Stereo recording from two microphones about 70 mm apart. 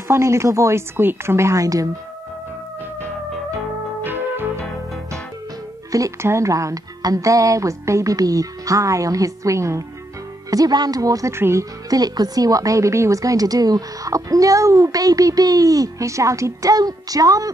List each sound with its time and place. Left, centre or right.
0.1 s speech: right
4.0 s music: right
5.9 s music: right
6.2 s speech: right
10.5 s a woman's voice: right
11.3 s speech: right
11.9 s a woman's voice: right